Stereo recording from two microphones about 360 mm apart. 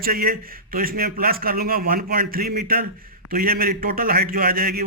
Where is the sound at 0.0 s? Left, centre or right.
Right.